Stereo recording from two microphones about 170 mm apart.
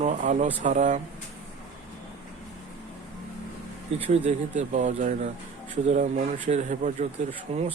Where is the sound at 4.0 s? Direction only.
35° right (ahead or behind).